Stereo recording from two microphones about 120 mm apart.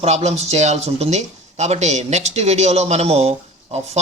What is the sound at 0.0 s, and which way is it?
A man's voice, 65° right (ahead or behind).